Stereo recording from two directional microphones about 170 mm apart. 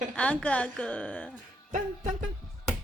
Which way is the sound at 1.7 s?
45° right (ahead or behind).